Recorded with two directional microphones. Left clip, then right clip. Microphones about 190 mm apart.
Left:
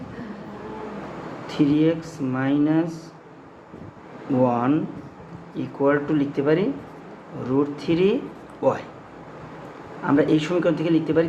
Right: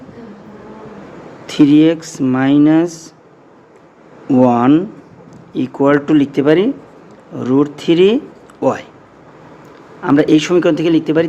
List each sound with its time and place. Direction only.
1.5 s speech: 50° right (ahead or behind)
4.4 s speech: 50° right (ahead or behind)
10.0 s speech: 50° right (ahead or behind)